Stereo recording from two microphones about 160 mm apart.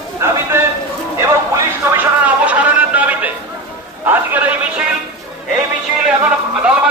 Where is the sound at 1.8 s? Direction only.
10° right (ahead or behind).